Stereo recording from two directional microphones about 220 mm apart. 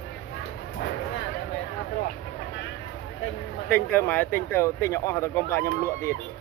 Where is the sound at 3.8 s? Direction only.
5° left (ahead or behind).